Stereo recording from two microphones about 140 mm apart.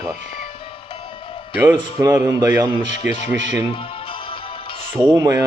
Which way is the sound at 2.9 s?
55° left (ahead or behind).